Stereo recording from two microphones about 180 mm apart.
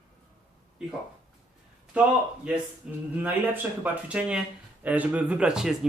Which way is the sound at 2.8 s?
5° right (ahead or behind).